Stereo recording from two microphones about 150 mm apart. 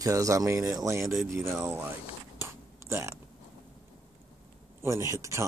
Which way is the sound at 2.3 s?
15° right (ahead or behind).